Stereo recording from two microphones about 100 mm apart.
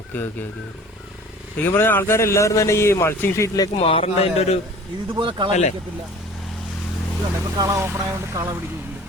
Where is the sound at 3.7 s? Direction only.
75° left (ahead or behind).